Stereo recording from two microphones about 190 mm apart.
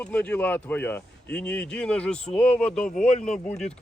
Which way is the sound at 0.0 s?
5° left (ahead or behind).